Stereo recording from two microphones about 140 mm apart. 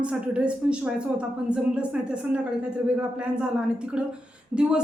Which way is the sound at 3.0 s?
5° right (ahead or behind).